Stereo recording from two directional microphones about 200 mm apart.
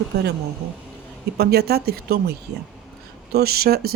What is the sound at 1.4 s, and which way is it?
Speech, 50° right (ahead or behind).